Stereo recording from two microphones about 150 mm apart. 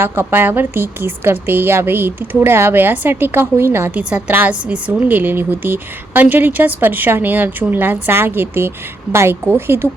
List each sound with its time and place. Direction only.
0.0 s a woman's voice: 15° right (ahead or behind)